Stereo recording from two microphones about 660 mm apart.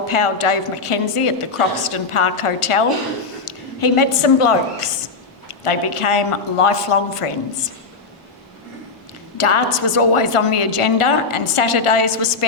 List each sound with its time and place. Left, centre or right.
0.1 s a woman's voice: left
9.4 s a woman's voice: left